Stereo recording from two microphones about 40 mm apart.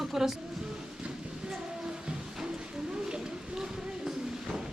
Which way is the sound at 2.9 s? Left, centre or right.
Centre.